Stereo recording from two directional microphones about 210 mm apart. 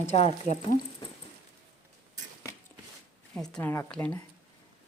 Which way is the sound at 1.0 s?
20° left (ahead or behind).